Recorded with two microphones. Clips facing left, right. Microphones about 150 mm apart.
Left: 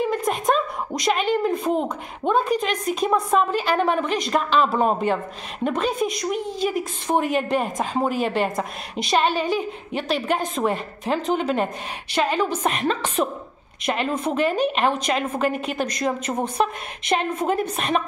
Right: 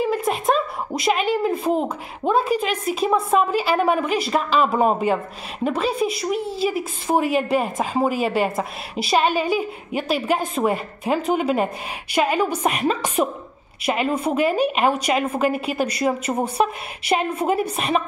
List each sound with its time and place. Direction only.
0.0 s a woman's voice: 5° right (ahead or behind)